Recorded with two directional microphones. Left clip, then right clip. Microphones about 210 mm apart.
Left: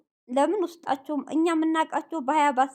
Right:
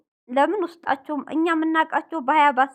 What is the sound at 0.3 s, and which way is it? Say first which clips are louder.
Speech: right 3 dB; 20° right (ahead or behind).